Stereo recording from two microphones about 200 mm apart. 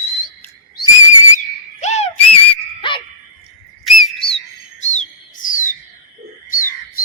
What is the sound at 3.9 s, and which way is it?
Whistle, centre (ahead or behind).